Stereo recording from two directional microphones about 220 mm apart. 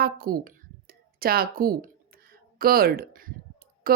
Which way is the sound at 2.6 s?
40° right (ahead or behind).